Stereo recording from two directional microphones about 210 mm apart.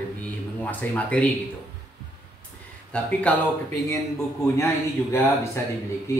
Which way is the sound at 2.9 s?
5° left (ahead or behind).